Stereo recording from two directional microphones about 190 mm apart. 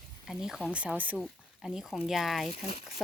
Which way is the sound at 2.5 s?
30° left (ahead or behind).